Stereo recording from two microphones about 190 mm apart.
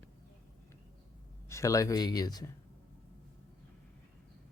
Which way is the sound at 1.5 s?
15° left (ahead or behind).